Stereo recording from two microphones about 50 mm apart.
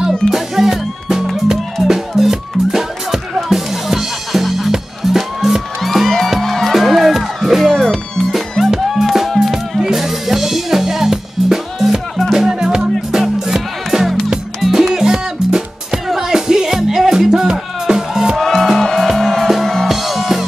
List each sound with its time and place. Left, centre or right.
0.3 s music: centre
18.4 s music: centre